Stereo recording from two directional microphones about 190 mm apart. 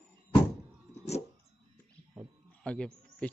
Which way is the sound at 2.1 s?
5° left (ahead or behind).